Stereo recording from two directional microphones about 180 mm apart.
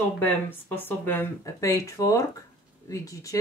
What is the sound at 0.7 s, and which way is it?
Speech, 10° left (ahead or behind).